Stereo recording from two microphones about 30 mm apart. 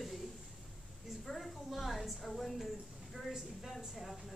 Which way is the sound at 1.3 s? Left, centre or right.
Centre.